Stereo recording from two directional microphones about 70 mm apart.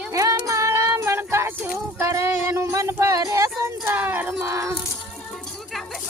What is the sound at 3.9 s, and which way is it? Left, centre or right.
Speech, right.